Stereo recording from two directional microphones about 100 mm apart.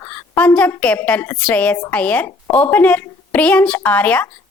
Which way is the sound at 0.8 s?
10° left (ahead or behind).